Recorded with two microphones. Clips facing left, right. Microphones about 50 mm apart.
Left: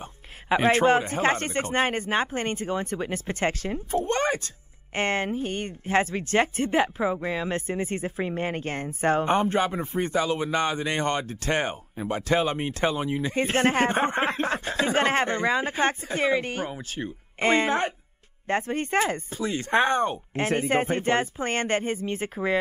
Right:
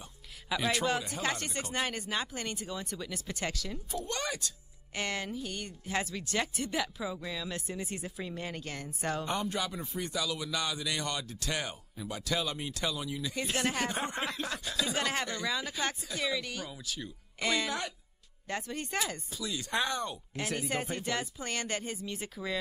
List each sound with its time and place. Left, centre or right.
0.0 s speech: left